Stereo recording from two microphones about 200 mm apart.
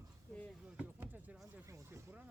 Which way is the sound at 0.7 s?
10° right (ahead or behind).